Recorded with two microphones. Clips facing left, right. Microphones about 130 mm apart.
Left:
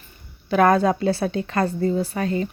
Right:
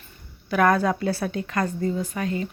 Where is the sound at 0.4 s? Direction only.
25° left (ahead or behind).